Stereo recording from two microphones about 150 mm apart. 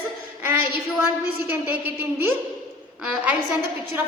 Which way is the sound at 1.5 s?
10° right (ahead or behind).